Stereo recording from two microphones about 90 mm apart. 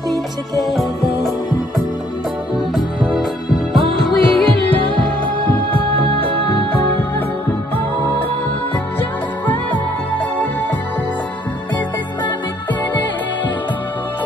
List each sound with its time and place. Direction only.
0.7 s music: centre (ahead or behind)
2.7 s music: centre (ahead or behind)
4.8 s music: 70° right (ahead or behind)
9.5 s music: 20° left (ahead or behind)